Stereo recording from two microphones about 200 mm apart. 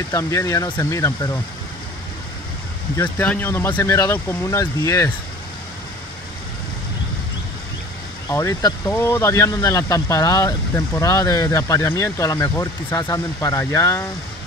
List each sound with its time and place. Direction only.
0.1 s speech: 15° left (ahead or behind)
3.0 s speech: 10° left (ahead or behind)
8.3 s speech: 15° left (ahead or behind)